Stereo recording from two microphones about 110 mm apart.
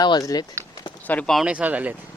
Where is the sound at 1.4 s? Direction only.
10° right (ahead or behind).